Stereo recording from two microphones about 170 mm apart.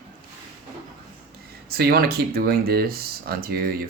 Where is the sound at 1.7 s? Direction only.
65° right (ahead or behind).